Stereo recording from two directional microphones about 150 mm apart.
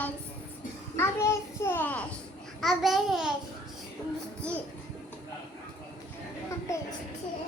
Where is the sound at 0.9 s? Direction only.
15° left (ahead or behind).